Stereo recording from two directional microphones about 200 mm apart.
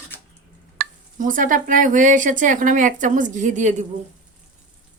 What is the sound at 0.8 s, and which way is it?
Speech, 40° right (ahead or behind).